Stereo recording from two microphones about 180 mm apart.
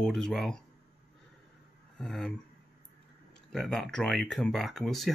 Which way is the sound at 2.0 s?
5° left (ahead or behind).